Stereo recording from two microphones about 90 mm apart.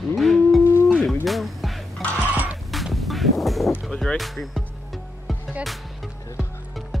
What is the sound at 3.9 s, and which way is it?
Speech, 5° left (ahead or behind).